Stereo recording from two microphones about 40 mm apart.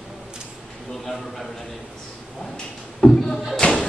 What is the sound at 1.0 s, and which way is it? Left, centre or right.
Speech, centre.